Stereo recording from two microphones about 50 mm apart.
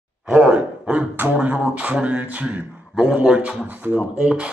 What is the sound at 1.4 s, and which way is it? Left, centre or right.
Speech, right.